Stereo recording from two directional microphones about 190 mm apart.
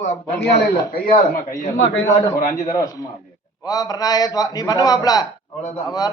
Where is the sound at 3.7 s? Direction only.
20° left (ahead or behind).